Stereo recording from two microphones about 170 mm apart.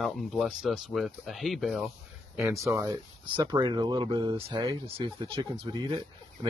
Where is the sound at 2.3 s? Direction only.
15° right (ahead or behind).